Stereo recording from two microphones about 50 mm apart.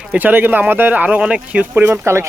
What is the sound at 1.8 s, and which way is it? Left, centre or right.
Speech, right.